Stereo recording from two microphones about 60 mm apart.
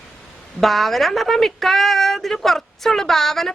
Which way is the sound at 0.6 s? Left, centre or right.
Centre.